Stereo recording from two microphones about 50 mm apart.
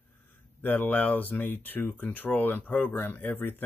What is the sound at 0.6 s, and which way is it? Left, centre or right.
Speech, left.